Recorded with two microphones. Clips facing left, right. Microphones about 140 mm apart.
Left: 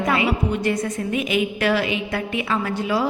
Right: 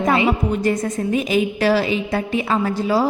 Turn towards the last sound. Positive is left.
turn(degrees=-35)  # may be behind; listen again after turning